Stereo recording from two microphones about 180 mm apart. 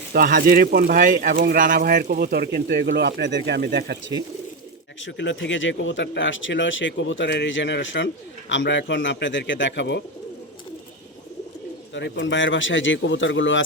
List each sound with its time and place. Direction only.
0.1 s speech: 55° right (ahead or behind)
4.9 s speech: 90° left
11.9 s speech: 85° left